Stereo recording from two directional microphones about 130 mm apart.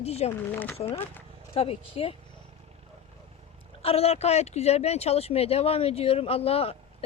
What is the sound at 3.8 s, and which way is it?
Speech, 50° left (ahead or behind).